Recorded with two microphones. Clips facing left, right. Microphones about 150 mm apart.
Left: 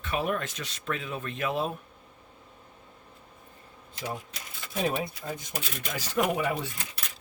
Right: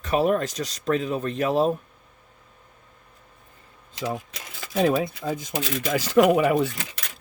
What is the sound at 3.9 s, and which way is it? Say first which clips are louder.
Speech: right 6 dB; 90° right.